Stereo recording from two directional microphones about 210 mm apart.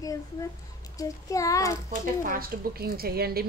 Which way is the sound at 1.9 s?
45° right (ahead or behind).